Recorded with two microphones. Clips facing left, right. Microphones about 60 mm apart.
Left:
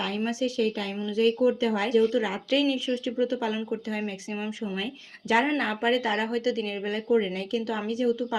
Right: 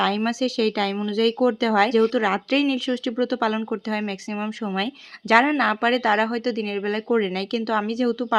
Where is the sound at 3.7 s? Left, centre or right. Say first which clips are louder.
Right 5 dB; right.